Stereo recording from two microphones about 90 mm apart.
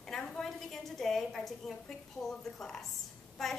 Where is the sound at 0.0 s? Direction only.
5° left (ahead or behind).